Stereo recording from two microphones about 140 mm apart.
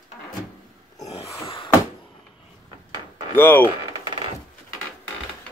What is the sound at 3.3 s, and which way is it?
Speech, 15° left (ahead or behind).